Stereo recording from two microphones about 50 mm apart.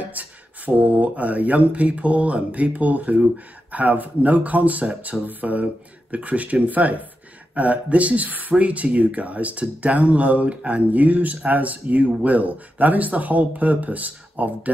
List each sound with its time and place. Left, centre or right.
0.0 s speech: right